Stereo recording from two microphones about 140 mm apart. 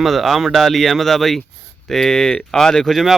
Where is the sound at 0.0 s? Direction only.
Centre (ahead or behind).